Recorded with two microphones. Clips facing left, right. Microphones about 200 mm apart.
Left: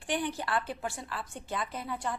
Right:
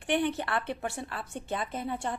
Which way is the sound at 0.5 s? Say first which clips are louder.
Right 1 dB; 25° right (ahead or behind).